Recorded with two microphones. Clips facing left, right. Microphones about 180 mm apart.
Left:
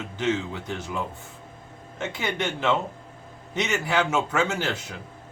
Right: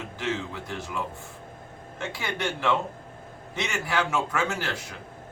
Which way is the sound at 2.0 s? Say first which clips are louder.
Left 3 dB; 20° left (ahead or behind).